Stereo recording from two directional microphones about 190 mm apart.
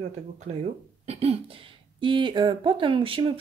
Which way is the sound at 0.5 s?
35° right (ahead or behind).